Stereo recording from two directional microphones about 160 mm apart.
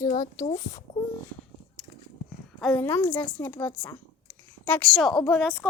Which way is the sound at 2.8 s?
15° left (ahead or behind).